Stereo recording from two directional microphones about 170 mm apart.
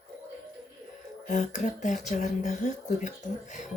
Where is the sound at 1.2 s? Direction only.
50° left (ahead or behind).